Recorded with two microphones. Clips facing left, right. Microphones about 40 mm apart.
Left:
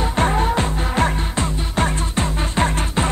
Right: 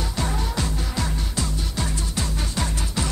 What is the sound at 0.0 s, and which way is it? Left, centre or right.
Music, left.